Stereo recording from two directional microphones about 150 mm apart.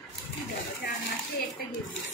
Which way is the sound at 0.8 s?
90° left.